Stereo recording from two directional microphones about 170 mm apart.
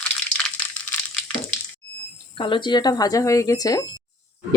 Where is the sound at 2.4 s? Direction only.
30° left (ahead or behind).